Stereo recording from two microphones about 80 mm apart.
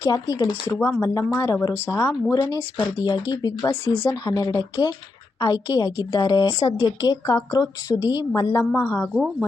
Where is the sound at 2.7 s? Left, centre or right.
Left.